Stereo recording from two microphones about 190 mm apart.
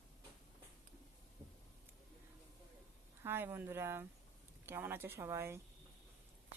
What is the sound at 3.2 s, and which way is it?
Speech, 10° right (ahead or behind).